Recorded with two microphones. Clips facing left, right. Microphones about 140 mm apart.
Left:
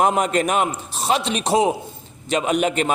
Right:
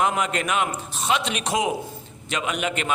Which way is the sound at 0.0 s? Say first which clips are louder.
Left 5 dB; 40° left (ahead or behind).